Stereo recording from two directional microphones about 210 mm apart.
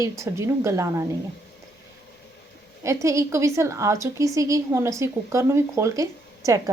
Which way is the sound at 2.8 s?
15° right (ahead or behind).